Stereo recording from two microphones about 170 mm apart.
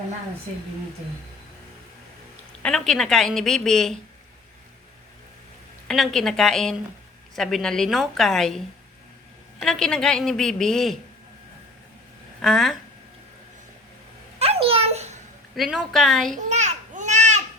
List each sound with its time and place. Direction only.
2.6 s a woman's voice: centre (ahead or behind)
5.9 s a woman's voice: centre (ahead or behind)
12.4 s a woman's voice: centre (ahead or behind)
14.3 s a sound: 35° right (ahead or behind)
15.5 s a woman's voice: centre (ahead or behind)
16.3 s a sound: 40° right (ahead or behind)